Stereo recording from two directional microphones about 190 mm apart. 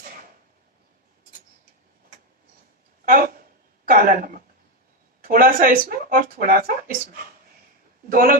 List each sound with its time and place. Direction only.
3.1 s a sound: 50° right (ahead or behind)
3.8 s speech: 50° right (ahead or behind)
8.1 s speech: 50° right (ahead or behind)